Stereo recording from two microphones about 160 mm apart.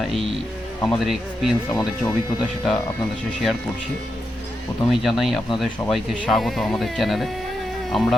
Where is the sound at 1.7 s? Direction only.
25° left (ahead or behind).